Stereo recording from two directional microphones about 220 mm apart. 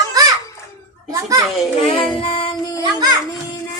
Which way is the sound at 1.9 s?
25° left (ahead or behind).